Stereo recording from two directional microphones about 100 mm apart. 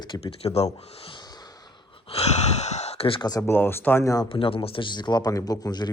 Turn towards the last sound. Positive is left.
turn(degrees=40)  # may be behind; listen again after turning